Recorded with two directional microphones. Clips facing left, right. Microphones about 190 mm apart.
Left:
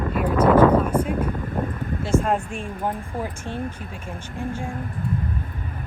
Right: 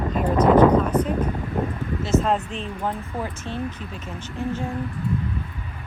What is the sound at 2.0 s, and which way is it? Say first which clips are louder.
Speech: even; 10° left (ahead or behind).